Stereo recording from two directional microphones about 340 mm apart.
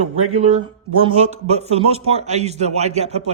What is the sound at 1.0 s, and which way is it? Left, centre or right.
Speech, centre.